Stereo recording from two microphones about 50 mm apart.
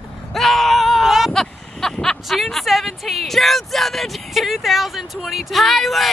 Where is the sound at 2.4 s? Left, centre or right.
Centre.